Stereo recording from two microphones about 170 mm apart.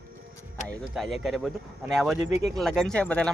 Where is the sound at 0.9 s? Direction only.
Centre (ahead or behind).